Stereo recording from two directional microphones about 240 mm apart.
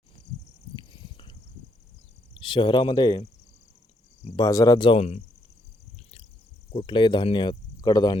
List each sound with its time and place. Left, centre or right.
0.9 s a sound: centre
2.3 s speech: left
4.2 s cricket: left
4.4 s speech: centre
6.7 s speech: centre